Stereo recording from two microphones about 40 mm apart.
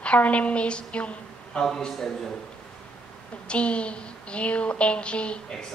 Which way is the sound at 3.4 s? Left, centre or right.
Left.